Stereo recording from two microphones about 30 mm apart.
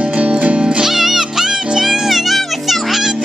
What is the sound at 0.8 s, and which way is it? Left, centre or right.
Music, centre.